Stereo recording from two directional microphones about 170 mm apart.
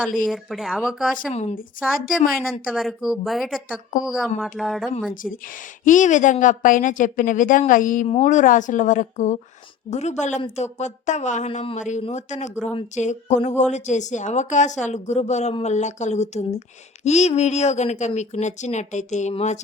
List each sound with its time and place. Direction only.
0.3 s a woman's voice: centre (ahead or behind)
1.1 s speech: 40° left (ahead or behind)
2.5 s a woman's voice: centre (ahead or behind)
5.8 s speech: 50° left (ahead or behind)
8.0 s speech: 40° left (ahead or behind)